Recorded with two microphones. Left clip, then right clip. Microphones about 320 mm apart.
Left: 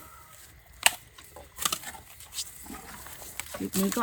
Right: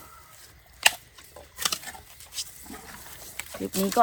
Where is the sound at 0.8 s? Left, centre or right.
Centre.